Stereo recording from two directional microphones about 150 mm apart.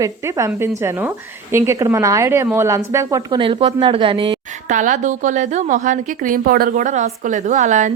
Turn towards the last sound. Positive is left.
turn(degrees=-55)  # may be behind; listen again after turning